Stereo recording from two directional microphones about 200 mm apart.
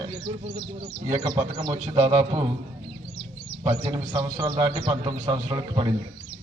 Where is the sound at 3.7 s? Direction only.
20° right (ahead or behind).